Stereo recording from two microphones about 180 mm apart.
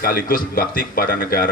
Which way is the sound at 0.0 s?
55° left (ahead or behind).